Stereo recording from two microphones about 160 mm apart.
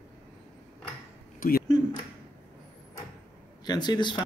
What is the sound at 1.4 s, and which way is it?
Speech, 60° left (ahead or behind).